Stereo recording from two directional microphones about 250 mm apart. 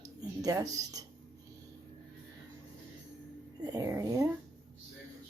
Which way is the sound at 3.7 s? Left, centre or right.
Centre.